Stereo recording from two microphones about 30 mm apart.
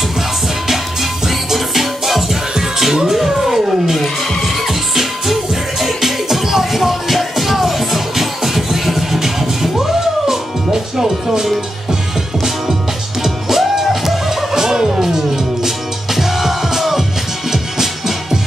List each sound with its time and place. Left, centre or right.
1.2 s music: centre
13.2 s music: centre
14.5 s turkey: centre
15.0 s music: centre